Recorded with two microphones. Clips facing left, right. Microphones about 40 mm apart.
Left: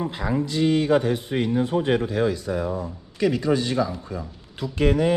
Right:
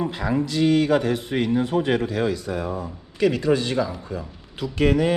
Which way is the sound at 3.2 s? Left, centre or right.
Right.